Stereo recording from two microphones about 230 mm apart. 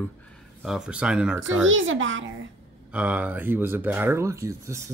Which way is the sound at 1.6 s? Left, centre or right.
Right.